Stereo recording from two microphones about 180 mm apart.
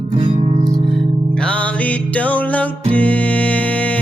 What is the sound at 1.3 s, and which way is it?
Music, 5° left (ahead or behind).